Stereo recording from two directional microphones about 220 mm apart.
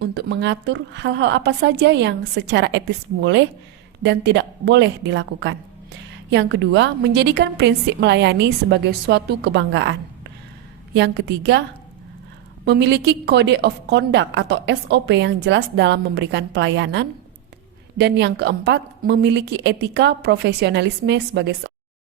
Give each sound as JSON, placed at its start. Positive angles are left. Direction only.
{"t": 0.0, "sound": "a woman's voice", "side_deg": -50}
{"t": 12.6, "sound": "a woman's voice", "side_deg": -50}